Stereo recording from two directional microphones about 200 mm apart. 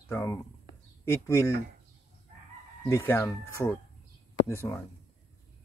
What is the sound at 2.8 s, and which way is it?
Speech, 10° left (ahead or behind).